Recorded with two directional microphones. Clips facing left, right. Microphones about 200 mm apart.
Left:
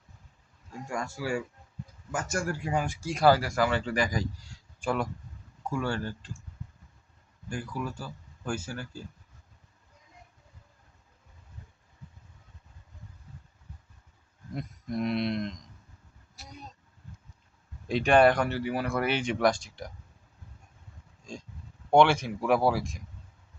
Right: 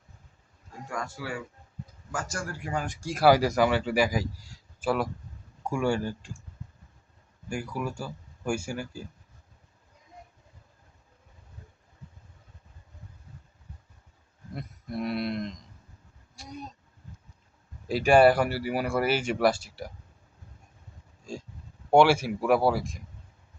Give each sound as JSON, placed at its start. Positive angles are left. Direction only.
{"t": 0.9, "sound": "speech", "side_deg": 25}
{"t": 2.3, "sound": "speech", "side_deg": 20}
{"t": 2.8, "sound": "speech", "side_deg": 5}
{"t": 3.2, "sound": "speech", "side_deg": -15}
{"t": 7.5, "sound": "speech", "side_deg": -10}
{"t": 14.5, "sound": "a sound", "side_deg": -5}
{"t": 17.8, "sound": "speech", "side_deg": -5}
{"t": 21.8, "sound": "speech", "side_deg": -10}